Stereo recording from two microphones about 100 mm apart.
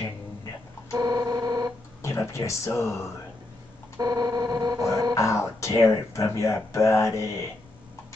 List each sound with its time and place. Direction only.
0.9 s organ: 40° right (ahead or behind)
2.0 s speech: 30° left (ahead or behind)
4.0 s a sound: 40° right (ahead or behind)
5.1 s speech: 30° left (ahead or behind)